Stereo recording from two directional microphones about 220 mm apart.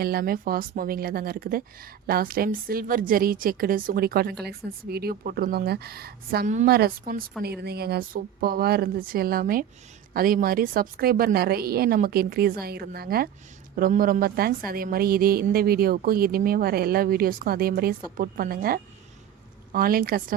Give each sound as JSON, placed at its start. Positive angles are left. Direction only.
{"t": 0.0, "sound": "a woman's voice", "side_deg": -45}